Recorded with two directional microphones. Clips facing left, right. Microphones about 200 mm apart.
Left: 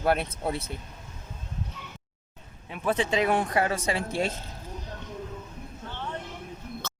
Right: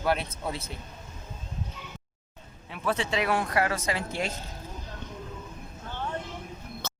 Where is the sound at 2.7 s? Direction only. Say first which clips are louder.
Left 3 dB; 15° left (ahead or behind).